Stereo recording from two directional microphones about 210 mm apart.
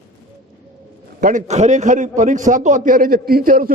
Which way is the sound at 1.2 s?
35° right (ahead or behind).